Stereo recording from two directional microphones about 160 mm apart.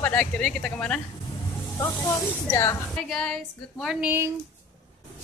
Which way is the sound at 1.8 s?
20° left (ahead or behind).